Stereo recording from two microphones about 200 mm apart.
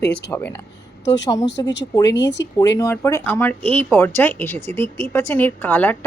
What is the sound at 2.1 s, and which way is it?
Speech, 60° left (ahead or behind).